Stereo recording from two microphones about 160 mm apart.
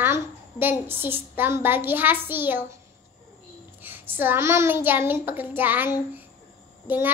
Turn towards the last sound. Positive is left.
turn(degrees=-15)  # may be behind; listen again after turning